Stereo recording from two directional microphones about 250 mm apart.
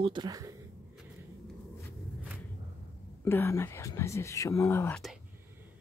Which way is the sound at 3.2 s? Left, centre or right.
Centre.